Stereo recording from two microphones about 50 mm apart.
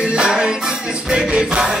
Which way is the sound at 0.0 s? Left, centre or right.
Centre.